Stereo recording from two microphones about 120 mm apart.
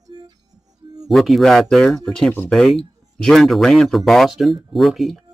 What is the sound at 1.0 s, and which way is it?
Speech, centre (ahead or behind).